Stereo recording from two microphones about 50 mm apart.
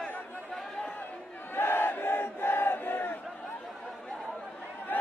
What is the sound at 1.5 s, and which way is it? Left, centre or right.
Battle cry, left.